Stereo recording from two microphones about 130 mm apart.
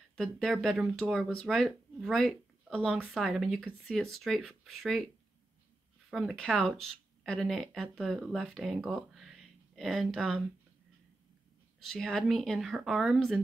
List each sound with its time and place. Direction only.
0.1 s speech: 5° left (ahead or behind)
2.9 s speech: 10° right (ahead or behind)
6.0 s speech: centre (ahead or behind)
11.8 s speech: 5° left (ahead or behind)